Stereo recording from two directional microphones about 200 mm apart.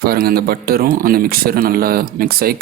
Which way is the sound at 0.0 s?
50° right (ahead or behind).